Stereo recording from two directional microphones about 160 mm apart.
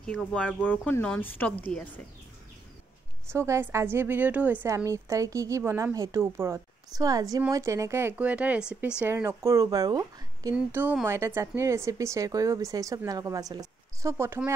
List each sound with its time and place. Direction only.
0.0 s speech: 5° left (ahead or behind)
3.3 s a woman's voice: 15° right (ahead or behind)
10.5 s a woman's voice: 10° right (ahead or behind)